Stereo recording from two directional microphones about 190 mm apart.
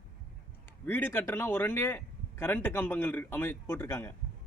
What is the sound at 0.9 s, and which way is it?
Speech, 10° left (ahead or behind).